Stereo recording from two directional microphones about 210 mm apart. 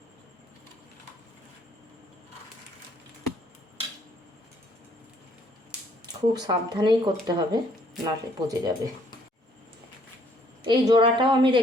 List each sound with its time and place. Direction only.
6.3 s speech: 20° right (ahead or behind)
10.6 s speech: 20° right (ahead or behind)